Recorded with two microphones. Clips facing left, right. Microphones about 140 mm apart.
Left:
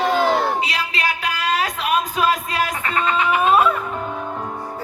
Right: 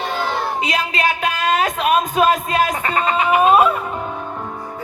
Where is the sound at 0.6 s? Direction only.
30° right (ahead or behind).